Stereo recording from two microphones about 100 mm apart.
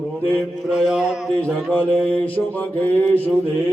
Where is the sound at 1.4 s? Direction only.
15° left (ahead or behind).